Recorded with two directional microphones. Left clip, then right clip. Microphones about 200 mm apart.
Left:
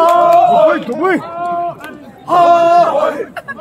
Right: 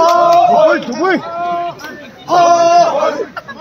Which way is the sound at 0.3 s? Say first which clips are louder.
Even; 25° right (ahead or behind).